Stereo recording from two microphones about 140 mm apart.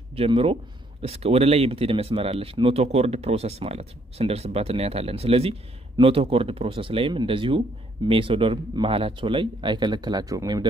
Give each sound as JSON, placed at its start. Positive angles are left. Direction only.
{"t": 0.1, "sound": "speech", "side_deg": -45}